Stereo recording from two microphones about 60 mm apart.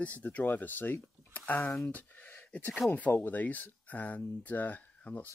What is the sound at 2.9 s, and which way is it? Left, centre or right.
Speech, left.